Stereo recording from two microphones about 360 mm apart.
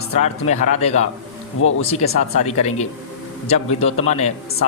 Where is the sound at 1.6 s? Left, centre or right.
Left.